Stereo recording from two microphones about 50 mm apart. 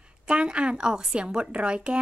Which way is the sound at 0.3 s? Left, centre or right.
Right.